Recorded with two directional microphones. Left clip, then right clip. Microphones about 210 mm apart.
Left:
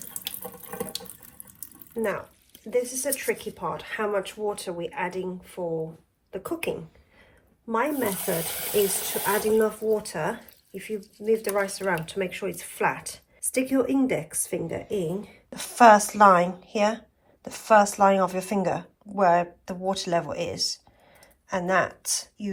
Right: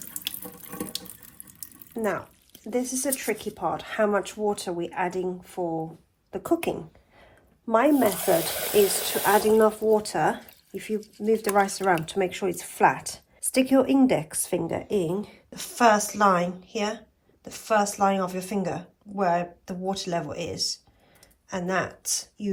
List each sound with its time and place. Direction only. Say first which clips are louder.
0.1 s water tap: right 3 dB; centre (ahead or behind)
2.0 s speech: even; 50° right (ahead or behind)
8.9 s speech: right 3 dB; centre (ahead or behind)
9.2 s speech: right 4 dB; 40° right (ahead or behind)
15.5 s a woman's voice: left 5 dB; 10° right (ahead or behind)